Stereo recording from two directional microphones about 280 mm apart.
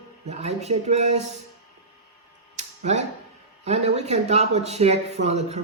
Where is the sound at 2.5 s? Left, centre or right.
Right.